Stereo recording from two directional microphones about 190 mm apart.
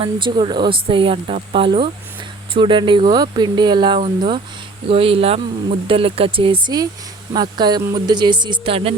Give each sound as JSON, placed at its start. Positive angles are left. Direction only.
{"t": 0.0, "sound": "speech", "side_deg": -25}